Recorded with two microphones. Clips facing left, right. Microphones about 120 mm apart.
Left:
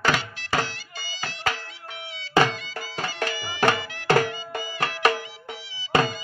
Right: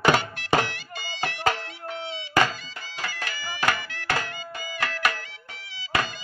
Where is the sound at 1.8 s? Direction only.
30° right (ahead or behind).